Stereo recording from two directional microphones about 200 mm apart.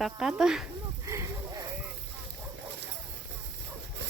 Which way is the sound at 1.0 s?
15° right (ahead or behind).